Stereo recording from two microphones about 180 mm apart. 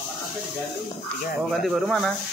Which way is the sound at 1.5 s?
Centre (ahead or behind).